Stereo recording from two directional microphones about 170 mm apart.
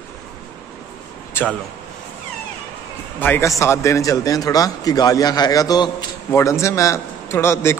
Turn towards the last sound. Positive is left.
turn(degrees=15)  # may be behind; listen again after turning